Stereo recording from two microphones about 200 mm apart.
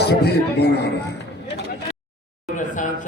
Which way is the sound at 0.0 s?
55° left (ahead or behind).